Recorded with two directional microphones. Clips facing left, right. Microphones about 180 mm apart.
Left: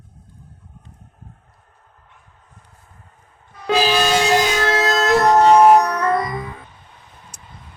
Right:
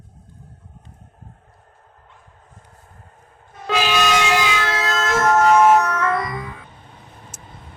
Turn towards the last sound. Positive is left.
turn(degrees=25)  # may be behind; listen again after turning